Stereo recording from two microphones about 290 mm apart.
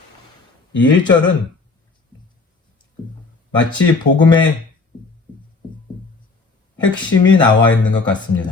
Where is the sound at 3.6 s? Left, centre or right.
Centre.